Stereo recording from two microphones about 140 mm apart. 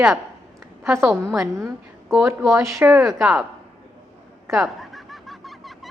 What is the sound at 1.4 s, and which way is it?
Speech, 20° right (ahead or behind).